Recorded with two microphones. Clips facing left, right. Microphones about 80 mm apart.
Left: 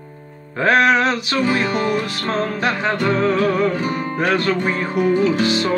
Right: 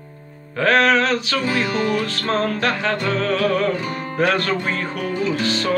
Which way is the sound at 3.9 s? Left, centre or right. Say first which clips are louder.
Left 1 dB; centre.